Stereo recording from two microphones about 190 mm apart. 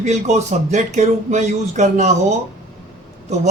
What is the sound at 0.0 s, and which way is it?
A man's voice, 35° right (ahead or behind).